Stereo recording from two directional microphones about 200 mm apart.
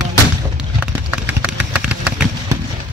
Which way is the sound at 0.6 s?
5° right (ahead or behind).